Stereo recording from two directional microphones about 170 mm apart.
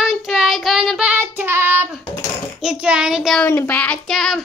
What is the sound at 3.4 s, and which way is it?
Child singing, 10° left (ahead or behind).